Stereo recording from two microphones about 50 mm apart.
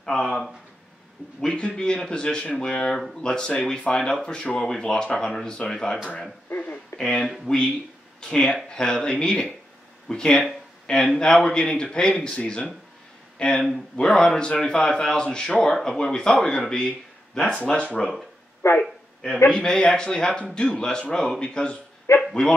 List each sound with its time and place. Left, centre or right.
0.0 s speech: centre
6.9 s a sound: left
7.5 s speech: centre
13.4 s speech: centre
17.4 s speech: left
18.8 s a sound: centre
19.5 s speech: centre